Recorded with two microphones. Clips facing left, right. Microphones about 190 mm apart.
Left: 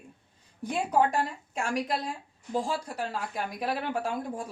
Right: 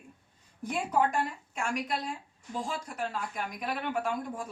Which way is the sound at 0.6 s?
35° left (ahead or behind).